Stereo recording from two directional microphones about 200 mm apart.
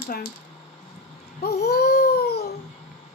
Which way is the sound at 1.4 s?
55° left (ahead or behind).